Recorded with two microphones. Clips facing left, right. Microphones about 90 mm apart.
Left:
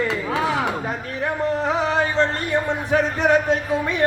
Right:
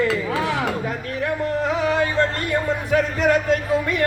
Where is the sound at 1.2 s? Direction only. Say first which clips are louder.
Left 1 dB; 30° left (ahead or behind).